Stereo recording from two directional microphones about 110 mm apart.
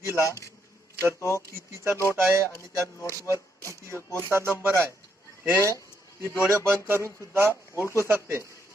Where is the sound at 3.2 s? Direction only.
30° right (ahead or behind).